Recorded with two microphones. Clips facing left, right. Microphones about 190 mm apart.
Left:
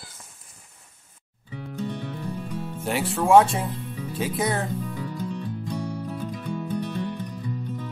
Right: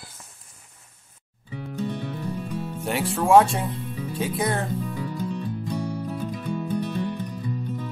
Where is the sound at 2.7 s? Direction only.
Centre (ahead or behind).